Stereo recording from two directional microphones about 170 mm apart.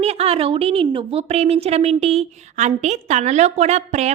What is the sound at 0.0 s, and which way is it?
A woman's voice, 35° right (ahead or behind).